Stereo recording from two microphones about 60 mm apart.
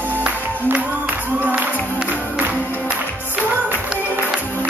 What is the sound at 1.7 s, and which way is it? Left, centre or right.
Music, left.